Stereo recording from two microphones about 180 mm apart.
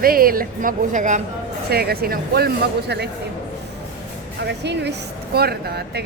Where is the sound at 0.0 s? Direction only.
55° right (ahead or behind).